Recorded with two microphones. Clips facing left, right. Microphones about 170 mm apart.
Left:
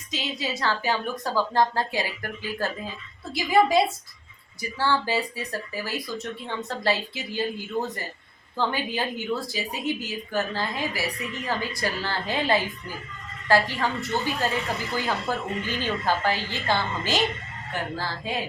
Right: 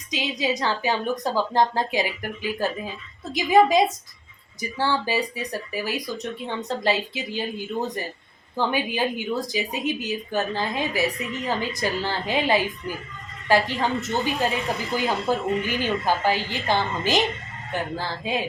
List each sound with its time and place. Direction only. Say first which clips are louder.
0.1 s a woman's voice: right 5 dB; 15° right (ahead or behind)